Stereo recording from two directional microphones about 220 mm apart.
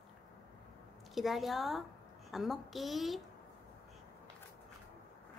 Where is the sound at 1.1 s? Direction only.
Centre (ahead or behind).